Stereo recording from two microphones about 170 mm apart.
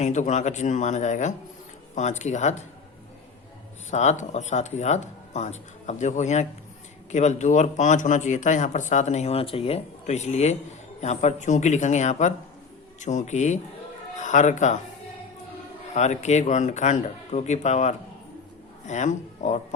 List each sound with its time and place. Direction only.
0.0 s speech: 45° left (ahead or behind)
3.9 s speech: 45° left (ahead or behind)
16.0 s speech: 40° left (ahead or behind)